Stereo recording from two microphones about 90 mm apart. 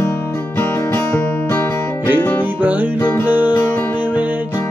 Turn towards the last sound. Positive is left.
turn(degrees=-20)  # may be behind; listen again after turning